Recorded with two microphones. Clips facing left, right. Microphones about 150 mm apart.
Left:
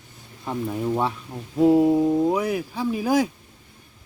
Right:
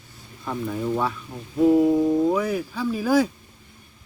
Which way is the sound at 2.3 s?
15° left (ahead or behind).